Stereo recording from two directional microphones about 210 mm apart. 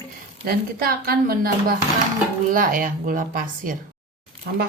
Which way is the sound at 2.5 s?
40° right (ahead or behind).